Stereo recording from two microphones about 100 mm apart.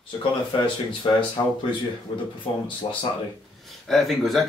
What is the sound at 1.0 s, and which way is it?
Speech, 50° left (ahead or behind).